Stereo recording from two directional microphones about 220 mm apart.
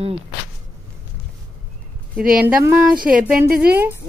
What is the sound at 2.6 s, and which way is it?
Speech, 5° right (ahead or behind).